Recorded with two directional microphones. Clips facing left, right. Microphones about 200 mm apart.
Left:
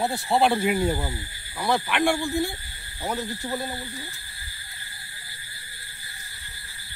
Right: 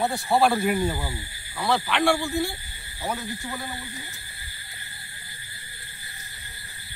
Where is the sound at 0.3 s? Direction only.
20° left (ahead or behind).